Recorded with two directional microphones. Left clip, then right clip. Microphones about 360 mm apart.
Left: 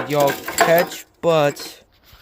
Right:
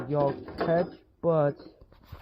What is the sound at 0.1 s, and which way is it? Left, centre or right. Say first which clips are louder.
Speech: left 9 dB; centre.